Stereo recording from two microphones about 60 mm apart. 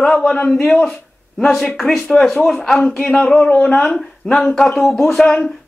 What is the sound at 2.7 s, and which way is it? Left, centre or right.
Speech, centre.